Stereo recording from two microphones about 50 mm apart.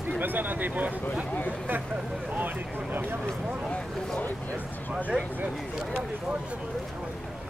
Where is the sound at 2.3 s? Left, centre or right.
Right.